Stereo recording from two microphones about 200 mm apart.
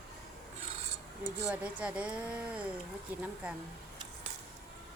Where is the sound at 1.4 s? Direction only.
5° right (ahead or behind).